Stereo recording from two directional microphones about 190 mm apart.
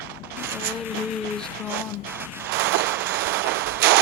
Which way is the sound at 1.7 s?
10° right (ahead or behind).